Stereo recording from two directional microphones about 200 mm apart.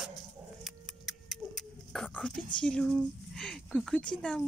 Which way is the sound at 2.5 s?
5° left (ahead or behind).